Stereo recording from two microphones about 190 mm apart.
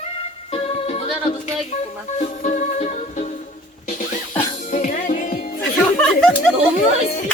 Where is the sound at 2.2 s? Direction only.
40° left (ahead or behind).